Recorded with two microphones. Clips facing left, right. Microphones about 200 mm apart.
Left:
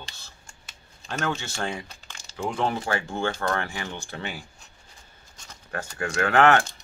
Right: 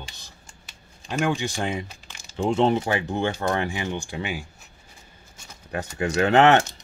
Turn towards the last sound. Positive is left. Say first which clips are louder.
# right 3 dB
turn(degrees=-20)  # may be behind; listen again after turning